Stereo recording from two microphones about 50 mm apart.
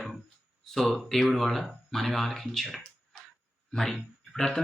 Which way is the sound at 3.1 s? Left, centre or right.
Centre.